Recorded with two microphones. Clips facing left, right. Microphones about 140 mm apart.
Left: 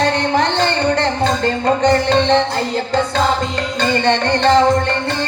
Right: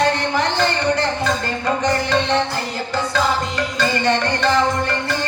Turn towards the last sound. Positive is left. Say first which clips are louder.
# left 4 dB
turn(degrees=30)  # may be behind; listen again after turning